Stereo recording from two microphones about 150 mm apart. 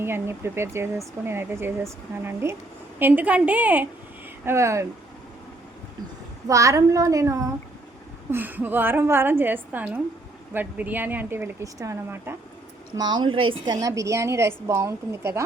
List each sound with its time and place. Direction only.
0.0 s a woman's voice: 15° right (ahead or behind)
6.5 s a woman's voice: 20° right (ahead or behind)
13.0 s a woman's voice: 30° right (ahead or behind)
13.7 s a woman's voice: 20° right (ahead or behind)